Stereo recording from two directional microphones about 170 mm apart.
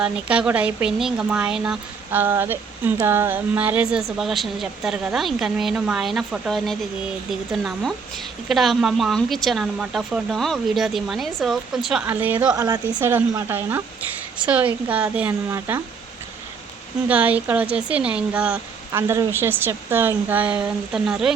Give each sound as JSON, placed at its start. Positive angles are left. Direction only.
{"t": 0.0, "sound": "speech", "side_deg": -5}
{"t": 12.5, "sound": "speech", "side_deg": -20}
{"t": 17.1, "sound": "speech", "side_deg": -10}